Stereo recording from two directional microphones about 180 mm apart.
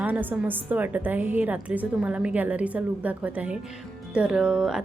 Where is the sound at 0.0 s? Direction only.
10° right (ahead or behind).